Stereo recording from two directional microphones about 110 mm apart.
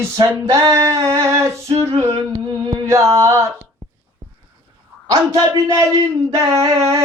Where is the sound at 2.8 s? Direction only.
30° right (ahead or behind).